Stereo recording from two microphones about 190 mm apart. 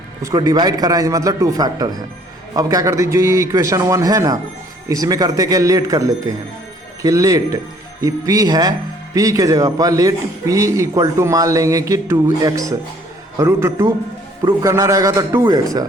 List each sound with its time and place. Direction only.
0.2 s a man's voice: 20° right (ahead or behind)